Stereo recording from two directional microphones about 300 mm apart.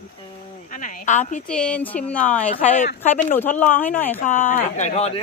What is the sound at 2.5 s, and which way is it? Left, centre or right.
Speech, left.